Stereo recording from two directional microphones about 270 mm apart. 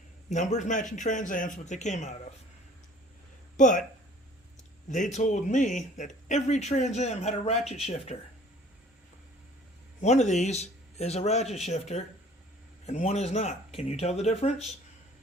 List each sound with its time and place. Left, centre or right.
0.3 s speech: left
3.6 s speech: left
4.9 s speech: left
10.0 s speech: left